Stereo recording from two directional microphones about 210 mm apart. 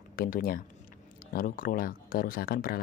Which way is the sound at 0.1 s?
45° left (ahead or behind).